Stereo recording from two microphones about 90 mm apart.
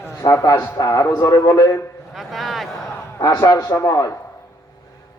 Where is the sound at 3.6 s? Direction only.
35° left (ahead or behind).